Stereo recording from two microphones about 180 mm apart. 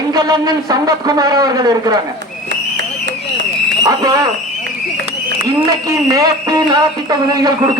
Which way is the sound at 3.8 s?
20° right (ahead or behind).